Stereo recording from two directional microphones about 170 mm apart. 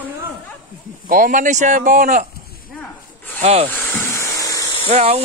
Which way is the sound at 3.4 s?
40° right (ahead or behind).